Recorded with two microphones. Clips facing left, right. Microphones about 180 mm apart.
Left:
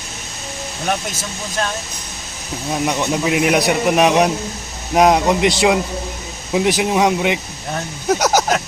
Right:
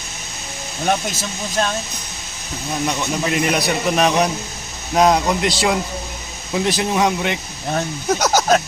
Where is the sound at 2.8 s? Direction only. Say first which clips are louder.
Left 3 dB; 10° left (ahead or behind).